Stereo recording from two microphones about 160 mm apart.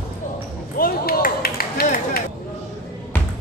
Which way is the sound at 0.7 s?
65° left (ahead or behind).